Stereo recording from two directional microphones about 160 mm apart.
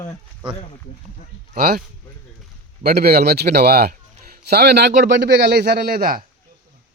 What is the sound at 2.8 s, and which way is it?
A man's voice, 75° right (ahead or behind).